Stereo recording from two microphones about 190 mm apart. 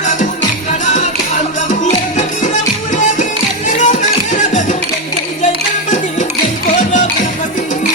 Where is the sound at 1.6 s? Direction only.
40° left (ahead or behind).